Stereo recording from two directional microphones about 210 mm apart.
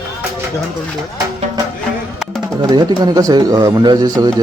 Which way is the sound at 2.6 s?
20° right (ahead or behind).